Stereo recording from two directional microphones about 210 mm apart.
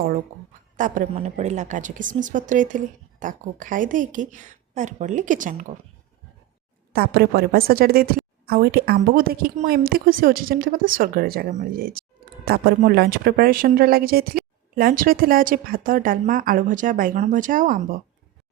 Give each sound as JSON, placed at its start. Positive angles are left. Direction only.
{"t": 0.8, "sound": "a woman's voice", "side_deg": -40}
{"t": 6.9, "sound": "a woman's voice", "side_deg": -50}